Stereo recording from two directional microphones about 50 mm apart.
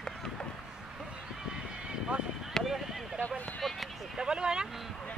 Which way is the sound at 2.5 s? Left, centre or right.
Centre.